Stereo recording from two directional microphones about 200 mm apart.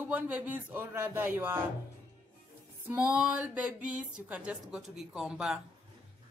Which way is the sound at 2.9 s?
5° right (ahead or behind).